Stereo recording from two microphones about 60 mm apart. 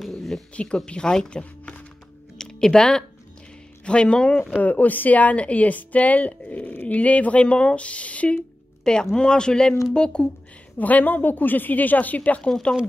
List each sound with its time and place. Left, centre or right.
0.0 s a sound: centre
0.6 s speech: centre
2.3 s a sound: centre
3.8 s speech: centre
4.6 s a woman's voice: left
10.8 s a woman's voice: left
12.4 s speech: centre